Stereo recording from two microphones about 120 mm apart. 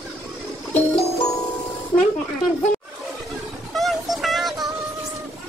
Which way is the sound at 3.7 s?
Centre (ahead or behind).